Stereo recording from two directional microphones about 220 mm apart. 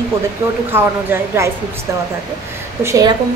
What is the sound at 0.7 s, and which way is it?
Speech, 10° right (ahead or behind).